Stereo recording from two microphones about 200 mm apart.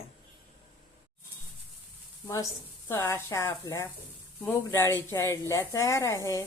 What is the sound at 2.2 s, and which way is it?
Speech, 15° left (ahead or behind).